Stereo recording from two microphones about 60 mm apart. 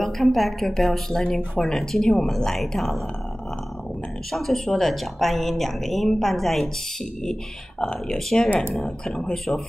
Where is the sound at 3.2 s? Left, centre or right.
Centre.